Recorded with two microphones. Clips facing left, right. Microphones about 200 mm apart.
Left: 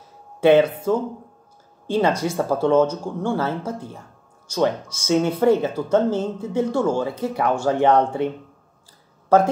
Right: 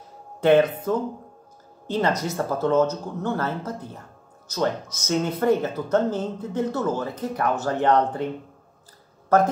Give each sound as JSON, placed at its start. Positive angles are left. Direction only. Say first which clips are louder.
{"t": 0.4, "sound": "speech", "louder": "left 3 dB", "side_deg": 10}